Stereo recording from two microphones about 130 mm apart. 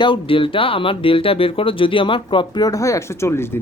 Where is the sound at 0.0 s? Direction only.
40° left (ahead or behind).